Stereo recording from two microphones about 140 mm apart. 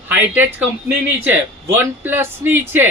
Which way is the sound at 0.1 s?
15° right (ahead or behind).